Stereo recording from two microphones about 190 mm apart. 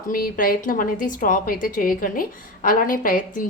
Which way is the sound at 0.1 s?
45° left (ahead or behind).